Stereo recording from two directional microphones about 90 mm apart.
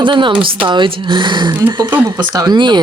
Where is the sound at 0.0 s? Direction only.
65° right (ahead or behind).